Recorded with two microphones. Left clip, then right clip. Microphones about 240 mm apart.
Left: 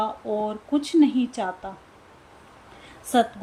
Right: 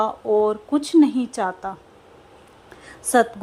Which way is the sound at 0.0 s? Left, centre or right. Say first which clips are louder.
Right 7 dB; centre.